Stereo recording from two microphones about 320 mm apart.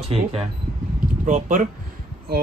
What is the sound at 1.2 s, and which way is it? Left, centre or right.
Speech, right.